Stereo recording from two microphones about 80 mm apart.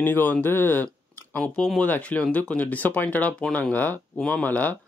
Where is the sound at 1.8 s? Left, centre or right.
Centre.